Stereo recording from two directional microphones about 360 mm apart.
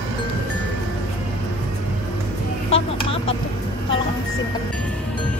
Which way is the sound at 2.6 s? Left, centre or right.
Centre.